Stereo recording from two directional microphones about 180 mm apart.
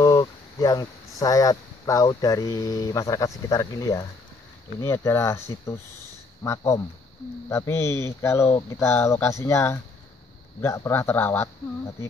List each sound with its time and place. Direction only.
0.0 s speech: 20° left (ahead or behind)